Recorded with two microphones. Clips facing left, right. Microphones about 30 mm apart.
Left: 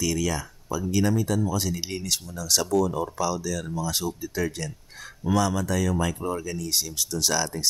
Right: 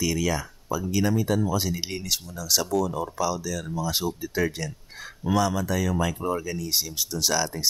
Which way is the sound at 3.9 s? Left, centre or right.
Centre.